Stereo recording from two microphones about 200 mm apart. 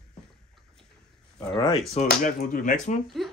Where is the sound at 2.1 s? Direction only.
40° left (ahead or behind).